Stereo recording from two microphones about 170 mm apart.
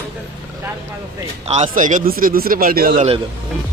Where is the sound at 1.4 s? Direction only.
40° right (ahead or behind); by 3.0 s 60° right (ahead or behind).